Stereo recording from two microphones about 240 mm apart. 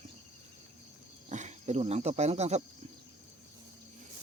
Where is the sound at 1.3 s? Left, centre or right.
Right.